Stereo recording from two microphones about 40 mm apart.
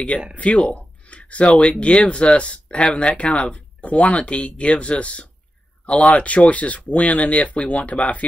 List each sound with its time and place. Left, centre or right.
0.4 s speech: left